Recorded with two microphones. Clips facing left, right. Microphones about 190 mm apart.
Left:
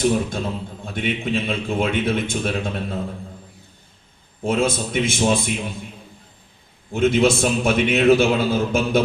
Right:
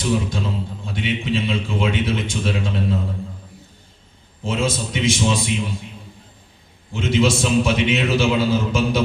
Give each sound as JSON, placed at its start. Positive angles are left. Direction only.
{"t": 0.0, "sound": "a man's voice", "side_deg": 55}
{"t": 4.4, "sound": "a man's voice", "side_deg": 55}
{"t": 6.9, "sound": "a man's voice", "side_deg": 55}